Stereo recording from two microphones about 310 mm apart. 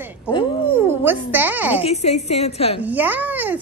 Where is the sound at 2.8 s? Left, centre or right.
Centre.